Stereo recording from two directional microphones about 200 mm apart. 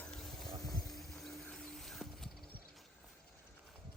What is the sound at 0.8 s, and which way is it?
Horse, centre (ahead or behind).